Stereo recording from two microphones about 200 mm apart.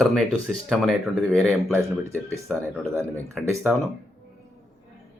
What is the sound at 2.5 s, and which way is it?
Speech, centre (ahead or behind).